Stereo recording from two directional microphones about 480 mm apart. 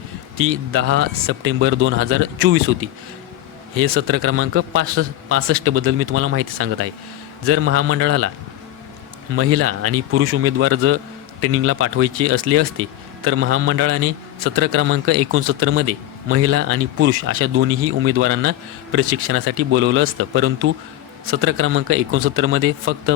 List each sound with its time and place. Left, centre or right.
0.3 s a man's voice: right
3.8 s a man's voice: right
9.3 s a man's voice: right